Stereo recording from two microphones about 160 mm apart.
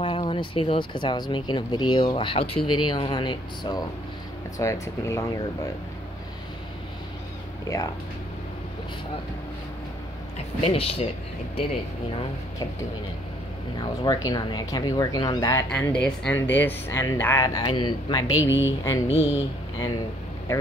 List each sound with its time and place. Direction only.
0.0 s speech: 35° left (ahead or behind)
7.6 s speech: 20° left (ahead or behind)
10.3 s speech: 40° left (ahead or behind)
13.7 s speech: 25° left (ahead or behind)
15.7 s speech: 5° left (ahead or behind); by 18.4 s 25° left (ahead or behind)
18.4 s speech: 15° right (ahead or behind)
19.0 s speech: 40° left (ahead or behind)